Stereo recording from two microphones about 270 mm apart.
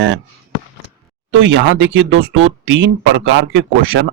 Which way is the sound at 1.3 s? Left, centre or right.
Right.